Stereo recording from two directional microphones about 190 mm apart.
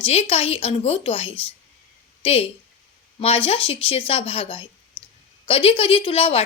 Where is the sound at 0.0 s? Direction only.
35° left (ahead or behind).